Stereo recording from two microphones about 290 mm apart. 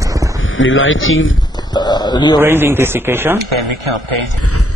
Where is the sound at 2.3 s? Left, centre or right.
Centre.